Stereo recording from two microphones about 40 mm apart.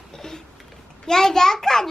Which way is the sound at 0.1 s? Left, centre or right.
Centre.